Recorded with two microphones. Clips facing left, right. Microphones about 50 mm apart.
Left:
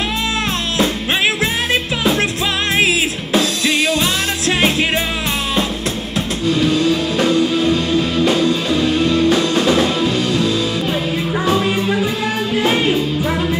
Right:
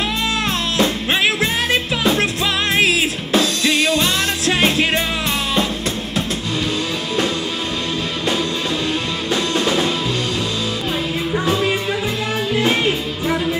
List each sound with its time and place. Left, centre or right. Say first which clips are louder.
1.4 s music: left 1 dB; centre